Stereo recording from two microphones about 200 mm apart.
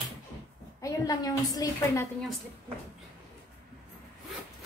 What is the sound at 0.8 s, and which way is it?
A woman's voice, 20° left (ahead or behind).